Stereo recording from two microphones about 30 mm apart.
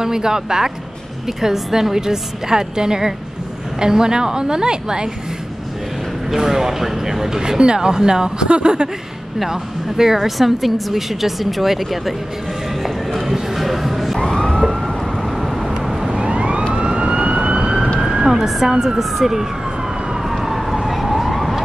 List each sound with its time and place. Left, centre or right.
0.0 s a woman's voice: right
6.3 s speech: centre
7.3 s a woman's voice: right
9.5 s speech: centre
12.8 s clip-clop: centre
14.2 s police car: centre
14.5 s police car: centre
16.1 s police car: right
16.7 s emergency vehicle: right
18.1 s emergency vehicle: centre
18.7 s a woman's voice: right
18.9 s speech: centre
20.2 s emergency vehicle: centre